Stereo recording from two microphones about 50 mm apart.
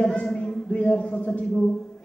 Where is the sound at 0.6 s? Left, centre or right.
Left.